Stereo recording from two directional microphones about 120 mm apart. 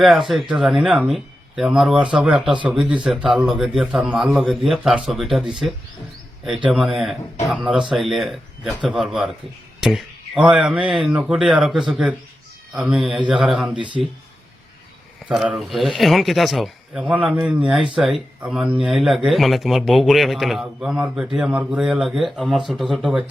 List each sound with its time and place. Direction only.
0.0 s speech: centre (ahead or behind)
13.7 s speech: 40° right (ahead or behind)
15.3 s speech: centre (ahead or behind)